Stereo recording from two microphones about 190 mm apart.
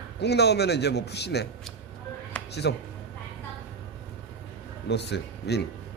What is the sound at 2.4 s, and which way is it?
Music, 5° left (ahead or behind).